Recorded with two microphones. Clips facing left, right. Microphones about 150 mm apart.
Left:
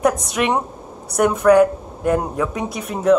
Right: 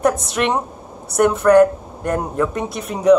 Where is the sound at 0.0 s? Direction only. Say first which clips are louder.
Even; centre (ahead or behind).